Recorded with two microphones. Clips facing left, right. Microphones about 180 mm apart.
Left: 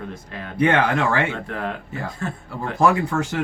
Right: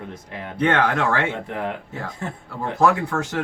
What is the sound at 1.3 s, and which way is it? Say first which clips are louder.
Speech: right 1 dB; 20° right (ahead or behind).